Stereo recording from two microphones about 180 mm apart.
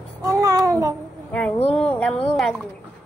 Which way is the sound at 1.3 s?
5° left (ahead or behind).